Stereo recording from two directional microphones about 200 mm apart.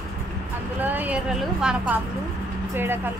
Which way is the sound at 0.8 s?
10° right (ahead or behind).